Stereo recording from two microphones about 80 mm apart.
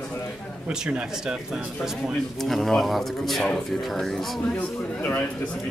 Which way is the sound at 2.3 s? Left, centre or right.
Centre.